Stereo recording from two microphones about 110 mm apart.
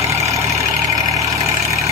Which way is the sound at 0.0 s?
25° right (ahead or behind).